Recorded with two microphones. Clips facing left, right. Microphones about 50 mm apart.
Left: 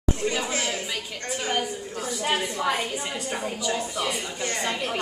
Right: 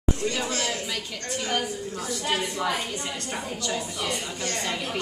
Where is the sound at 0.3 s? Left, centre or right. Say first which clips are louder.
Left 1 dB; left.